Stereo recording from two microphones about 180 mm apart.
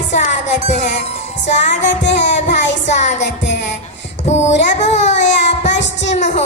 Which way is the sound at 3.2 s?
75° left (ahead or behind).